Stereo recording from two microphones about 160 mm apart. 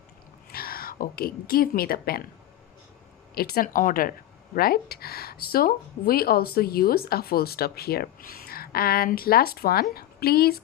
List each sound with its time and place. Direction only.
0.5 s a woman's voice: 70° left (ahead or behind)
3.3 s speech: 70° left (ahead or behind)